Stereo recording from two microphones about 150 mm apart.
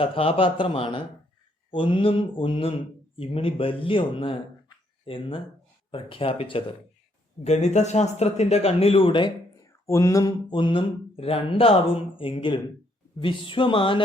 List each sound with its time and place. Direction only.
0.0 s speech: 40° left (ahead or behind)
9.8 s speech: 20° left (ahead or behind)